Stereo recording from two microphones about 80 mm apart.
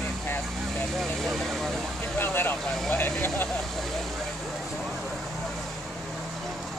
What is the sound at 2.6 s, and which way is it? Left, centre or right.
Speech, centre.